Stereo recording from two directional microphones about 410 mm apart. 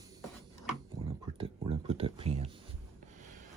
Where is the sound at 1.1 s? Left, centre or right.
Centre.